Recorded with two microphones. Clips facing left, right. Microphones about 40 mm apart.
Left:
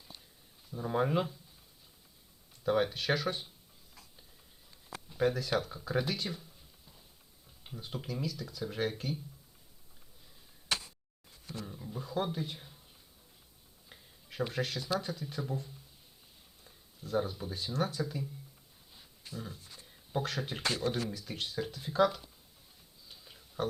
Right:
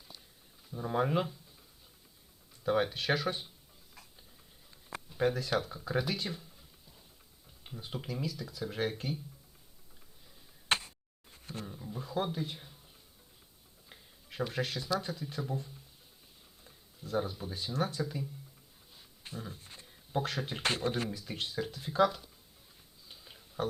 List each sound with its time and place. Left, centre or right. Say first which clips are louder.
0.7 s speech: even; centre
2.6 s speech: even; centre
5.0 s speech: even; centre
7.6 s speech: even; centre
10.7 s tick: right 4 dB; right
11.6 s speech: even; centre
13.9 s tick-tock: even; centre
14.5 s speech: right 1 dB; centre
19.2 s a sound: even; right
19.5 s speech: right 1 dB; right
19.8 s a sound: right 1 dB; centre
20.6 s speech: right 1 dB; right
21.2 s speech: even; centre
23.0 s a sound: right 1 dB; centre